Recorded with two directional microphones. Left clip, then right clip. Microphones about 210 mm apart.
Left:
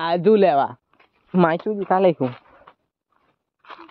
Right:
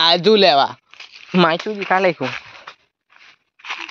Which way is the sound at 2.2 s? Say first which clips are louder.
Right 2 dB; 20° right (ahead or behind).